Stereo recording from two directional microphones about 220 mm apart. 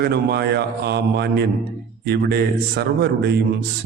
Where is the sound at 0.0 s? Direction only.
45° right (ahead or behind).